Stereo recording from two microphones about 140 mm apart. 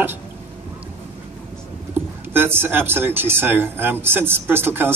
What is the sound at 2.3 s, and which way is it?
Speech, 15° right (ahead or behind).